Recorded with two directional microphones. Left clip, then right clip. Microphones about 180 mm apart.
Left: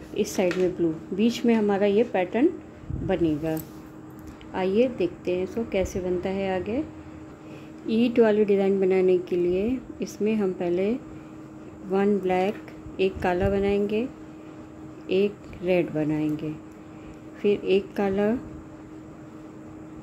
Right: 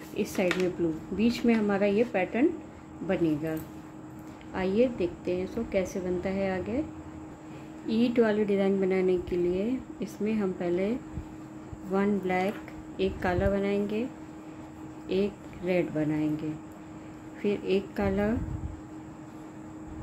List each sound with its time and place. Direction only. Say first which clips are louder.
0.1 s speech: left 4 dB; 25° left (ahead or behind)
4.6 s speech: left 4 dB; 25° left (ahead or behind)
7.8 s speech: left 5 dB; 25° left (ahead or behind)
15.0 s speech: left 6 dB; 25° left (ahead or behind)